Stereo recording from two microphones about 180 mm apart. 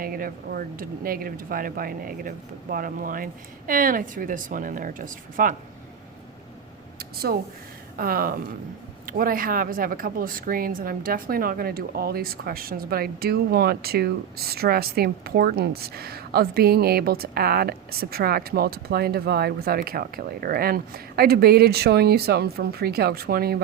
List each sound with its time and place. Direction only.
0.0 s speech: 55° right (ahead or behind)
7.0 s a sound: 60° right (ahead or behind)
7.9 s speech: 55° right (ahead or behind)